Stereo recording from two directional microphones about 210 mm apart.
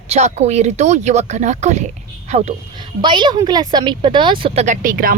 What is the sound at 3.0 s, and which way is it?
Speech, 20° right (ahead or behind).